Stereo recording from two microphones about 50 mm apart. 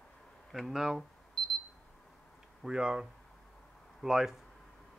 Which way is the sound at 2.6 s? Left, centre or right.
Centre.